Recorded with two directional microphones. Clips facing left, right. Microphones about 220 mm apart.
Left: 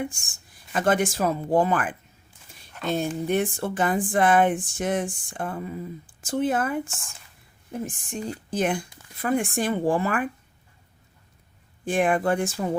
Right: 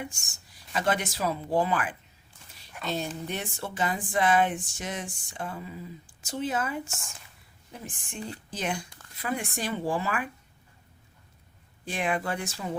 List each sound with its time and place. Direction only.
0.0 s speech: 50° left (ahead or behind)
11.9 s speech: 50° left (ahead or behind)